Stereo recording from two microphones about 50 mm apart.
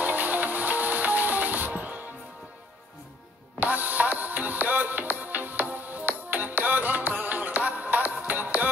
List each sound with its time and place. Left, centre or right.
0.0 s music: right
3.5 s music: right